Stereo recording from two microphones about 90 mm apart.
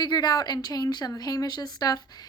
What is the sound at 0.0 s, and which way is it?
A woman's voice, 50° left (ahead or behind).